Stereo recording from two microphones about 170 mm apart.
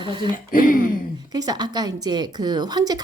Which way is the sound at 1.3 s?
20° right (ahead or behind).